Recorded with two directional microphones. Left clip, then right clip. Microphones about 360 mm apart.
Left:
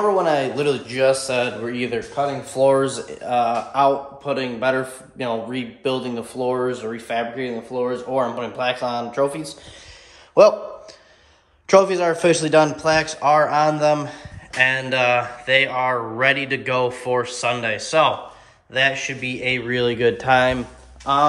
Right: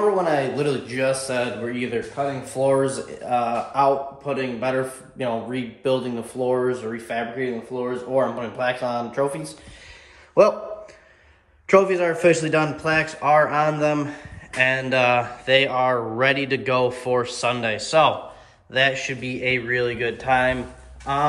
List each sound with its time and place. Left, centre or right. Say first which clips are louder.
0.2 s speech: left 2 dB; centre
11.9 s speech: left 1 dB; centre; by 20.5 s left
21.1 s speech: left 5 dB; centre